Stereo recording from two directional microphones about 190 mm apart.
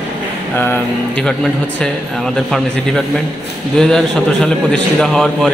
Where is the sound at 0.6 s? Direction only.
10° left (ahead or behind).